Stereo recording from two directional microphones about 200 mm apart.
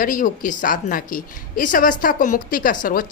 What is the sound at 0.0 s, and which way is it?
Speech, 40° left (ahead or behind).